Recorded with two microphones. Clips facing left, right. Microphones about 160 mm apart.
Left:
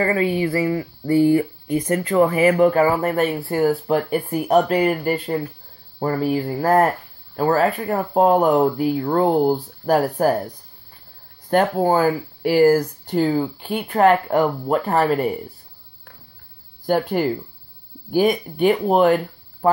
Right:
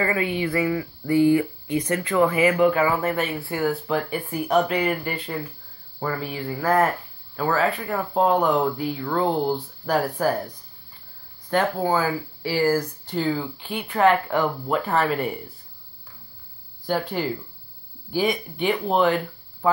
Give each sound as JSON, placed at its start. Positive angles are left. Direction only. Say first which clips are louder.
{"t": 0.0, "sound": "speech", "louder": "left 4 dB", "side_deg": 35}
{"t": 11.5, "sound": "speech", "louder": "left 5 dB", "side_deg": 45}
{"t": 16.8, "sound": "speech", "louder": "left 6 dB", "side_deg": 50}